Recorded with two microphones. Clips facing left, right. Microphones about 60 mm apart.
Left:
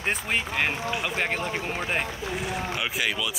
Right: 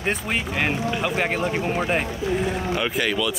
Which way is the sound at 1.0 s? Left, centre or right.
Centre.